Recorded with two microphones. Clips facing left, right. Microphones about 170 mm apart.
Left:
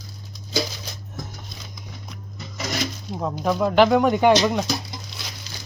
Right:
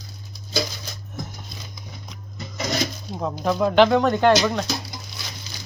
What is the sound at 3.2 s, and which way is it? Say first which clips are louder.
Speech: even; centre (ahead or behind).